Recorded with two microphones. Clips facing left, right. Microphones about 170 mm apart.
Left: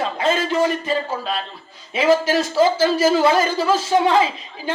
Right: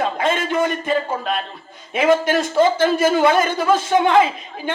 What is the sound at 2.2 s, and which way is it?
Speech, 50° right (ahead or behind).